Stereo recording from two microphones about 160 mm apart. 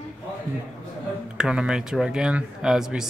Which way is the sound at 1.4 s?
5° right (ahead or behind).